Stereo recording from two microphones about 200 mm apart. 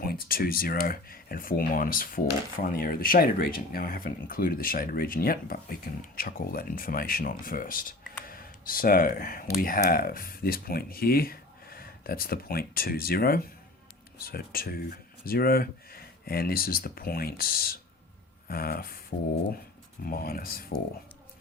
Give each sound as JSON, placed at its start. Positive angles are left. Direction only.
{"t": 0.0, "sound": "speech", "side_deg": 45}
{"t": 20.1, "sound": "speech", "side_deg": 45}